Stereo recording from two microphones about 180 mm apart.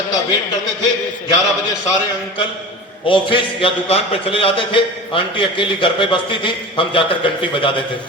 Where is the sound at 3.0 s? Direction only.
30° left (ahead or behind).